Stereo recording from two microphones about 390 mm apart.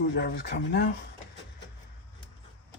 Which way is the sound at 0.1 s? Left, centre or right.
Left.